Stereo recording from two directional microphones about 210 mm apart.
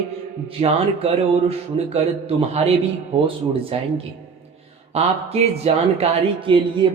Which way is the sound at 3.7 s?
25° right (ahead or behind).